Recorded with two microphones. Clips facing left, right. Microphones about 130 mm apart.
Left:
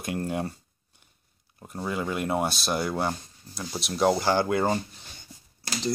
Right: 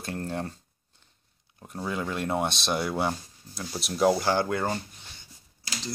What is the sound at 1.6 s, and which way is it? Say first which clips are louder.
Speech: left 1 dB; 5° left (ahead or behind).